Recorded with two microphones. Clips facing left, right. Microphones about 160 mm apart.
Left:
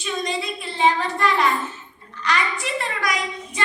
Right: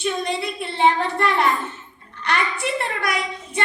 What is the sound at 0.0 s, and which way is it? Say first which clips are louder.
Child singing: right 2 dB; 60° right (ahead or behind).